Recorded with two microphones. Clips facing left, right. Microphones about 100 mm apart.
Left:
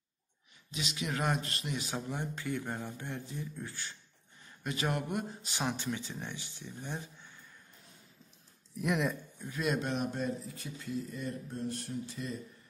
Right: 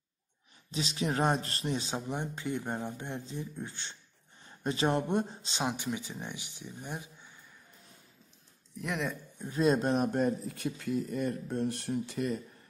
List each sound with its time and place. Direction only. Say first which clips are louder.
0.7 s speech: right 5 dB; 35° right (ahead or behind); by 7.3 s 15° right (ahead or behind)
8.7 s speech: left 3 dB; centre (ahead or behind)
9.4 s speech: right 7 dB; 30° right (ahead or behind); by 12.4 s 65° right (ahead or behind)